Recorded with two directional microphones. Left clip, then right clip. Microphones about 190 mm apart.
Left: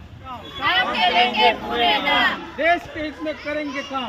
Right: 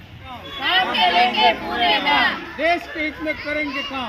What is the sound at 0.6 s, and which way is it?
Speech, 10° right (ahead or behind).